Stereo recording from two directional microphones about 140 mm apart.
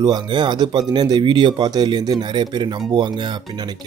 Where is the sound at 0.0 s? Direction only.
30° right (ahead or behind).